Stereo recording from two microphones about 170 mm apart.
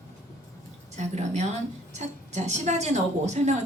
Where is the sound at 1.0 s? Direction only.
40° right (ahead or behind).